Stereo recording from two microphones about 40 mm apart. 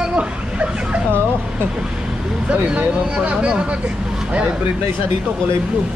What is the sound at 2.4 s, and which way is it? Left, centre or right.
Speech, right.